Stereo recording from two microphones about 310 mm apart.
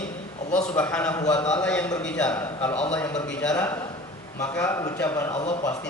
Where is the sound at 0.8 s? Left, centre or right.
Centre.